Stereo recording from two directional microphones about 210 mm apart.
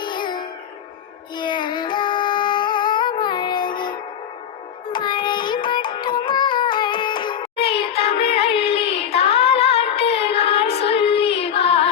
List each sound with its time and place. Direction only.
0.0 s music: 20° left (ahead or behind)
1.4 s child singing: 20° left (ahead or behind)
4.9 s music: 20° left (ahead or behind)
7.6 s child singing: 25° left (ahead or behind)